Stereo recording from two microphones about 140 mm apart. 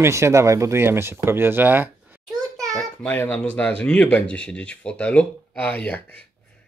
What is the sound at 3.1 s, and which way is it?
Speech, 10° left (ahead or behind).